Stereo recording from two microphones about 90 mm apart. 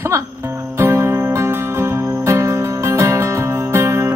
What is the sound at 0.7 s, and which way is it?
Music, 30° right (ahead or behind).